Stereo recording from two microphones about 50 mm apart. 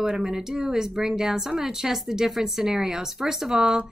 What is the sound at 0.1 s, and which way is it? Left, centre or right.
Speech, centre.